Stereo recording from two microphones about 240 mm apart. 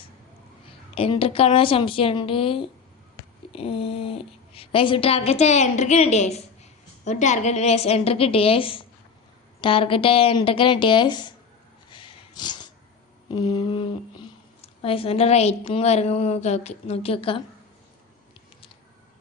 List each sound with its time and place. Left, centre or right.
0.9 s speech: left
11.9 s a sound: centre
13.3 s speech: centre